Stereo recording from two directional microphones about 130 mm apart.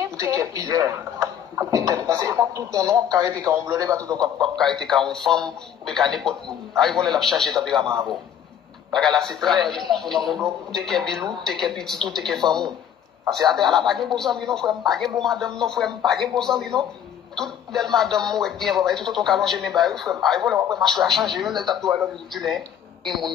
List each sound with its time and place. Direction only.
0.0 s speech: 25° right (ahead or behind)
4.4 s a man's voice: 5° left (ahead or behind)
8.9 s a man's voice: 5° left (ahead or behind)